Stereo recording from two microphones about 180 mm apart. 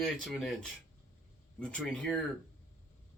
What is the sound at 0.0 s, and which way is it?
Speech, centre (ahead or behind).